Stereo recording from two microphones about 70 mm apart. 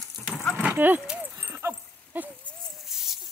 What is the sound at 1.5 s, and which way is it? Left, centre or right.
Dog, right.